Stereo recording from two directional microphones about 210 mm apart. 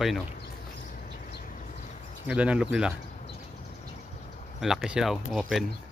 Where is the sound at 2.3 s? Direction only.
5° right (ahead or behind).